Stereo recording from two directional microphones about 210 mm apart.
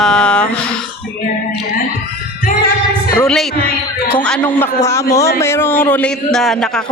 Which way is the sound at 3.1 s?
5° left (ahead or behind).